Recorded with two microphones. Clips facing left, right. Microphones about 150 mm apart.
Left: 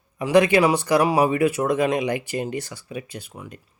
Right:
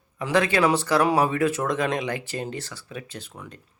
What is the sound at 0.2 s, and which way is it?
A man's voice, 15° left (ahead or behind).